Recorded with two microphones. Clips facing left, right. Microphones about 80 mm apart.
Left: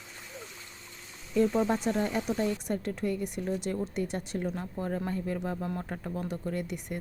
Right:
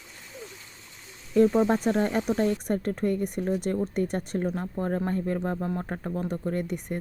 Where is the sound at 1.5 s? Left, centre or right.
Right.